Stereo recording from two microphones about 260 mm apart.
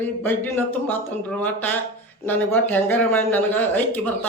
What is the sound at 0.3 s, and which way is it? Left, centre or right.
Speech, centre.